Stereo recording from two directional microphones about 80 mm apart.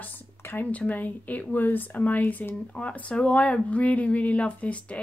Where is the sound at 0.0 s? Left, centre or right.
Left.